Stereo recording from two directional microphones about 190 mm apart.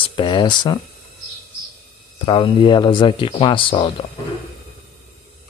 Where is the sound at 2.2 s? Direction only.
25° left (ahead or behind).